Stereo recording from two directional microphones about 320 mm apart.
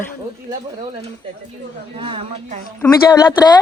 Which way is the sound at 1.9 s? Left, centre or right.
Centre.